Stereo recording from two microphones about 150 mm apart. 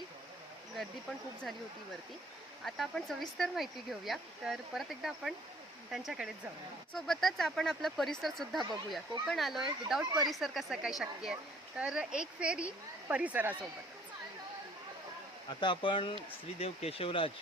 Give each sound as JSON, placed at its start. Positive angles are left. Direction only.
{"t": 2.6, "sound": "speech", "side_deg": 0}
{"t": 15.4, "sound": "speech", "side_deg": 30}